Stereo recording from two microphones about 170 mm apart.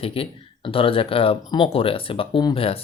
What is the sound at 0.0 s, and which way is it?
Speech, 35° left (ahead or behind).